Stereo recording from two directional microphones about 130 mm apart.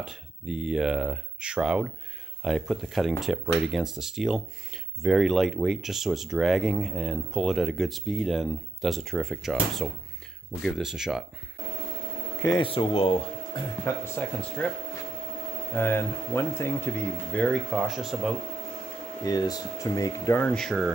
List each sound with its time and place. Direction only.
0.0 s speech: 5° right (ahead or behind)
12.5 s speech: 45° left (ahead or behind)
13.8 s speech: 15° left (ahead or behind)
15.7 s speech: 15° left (ahead or behind)
17.6 s speech: centre (ahead or behind)
19.2 s speech: 30° left (ahead or behind)
20.4 s speech: 5° left (ahead or behind)